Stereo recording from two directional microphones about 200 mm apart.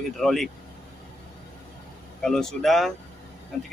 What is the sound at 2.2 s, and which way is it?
Speech, centre (ahead or behind).